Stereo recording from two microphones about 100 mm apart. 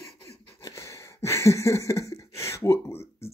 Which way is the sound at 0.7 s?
30° left (ahead or behind).